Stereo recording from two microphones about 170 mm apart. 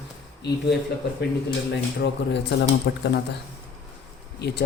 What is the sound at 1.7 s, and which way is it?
Speech, 90° left.